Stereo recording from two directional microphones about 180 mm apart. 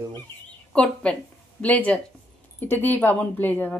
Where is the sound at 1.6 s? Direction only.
10° left (ahead or behind).